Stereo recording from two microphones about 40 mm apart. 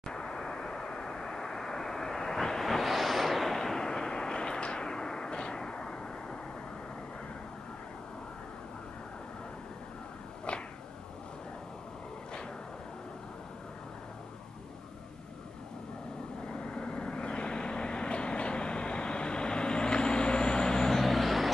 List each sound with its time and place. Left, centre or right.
0.1 s vehicle: centre
3.5 s artillery fire: centre
16.4 s vehicle: left
21.0 s vehicle: centre